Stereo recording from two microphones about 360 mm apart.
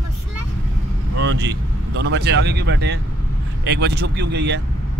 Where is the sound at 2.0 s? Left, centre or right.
Right.